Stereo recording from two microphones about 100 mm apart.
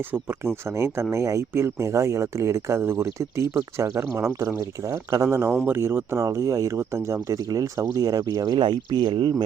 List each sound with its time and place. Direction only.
0.1 s speech: 25° right (ahead or behind); by 9.3 s 50° right (ahead or behind)